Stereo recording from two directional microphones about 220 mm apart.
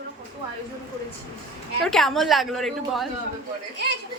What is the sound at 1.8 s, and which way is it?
A woman's voice, centre (ahead or behind).